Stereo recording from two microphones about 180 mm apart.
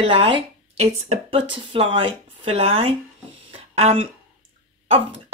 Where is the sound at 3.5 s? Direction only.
35° right (ahead or behind).